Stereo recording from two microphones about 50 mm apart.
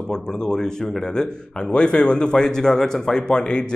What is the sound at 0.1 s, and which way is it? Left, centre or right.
A man's voice, centre.